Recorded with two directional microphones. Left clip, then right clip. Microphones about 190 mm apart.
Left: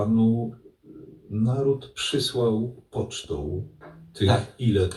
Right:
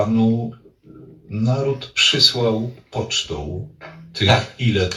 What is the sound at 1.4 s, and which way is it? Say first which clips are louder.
Speech: right 3 dB; 55° left (ahead or behind).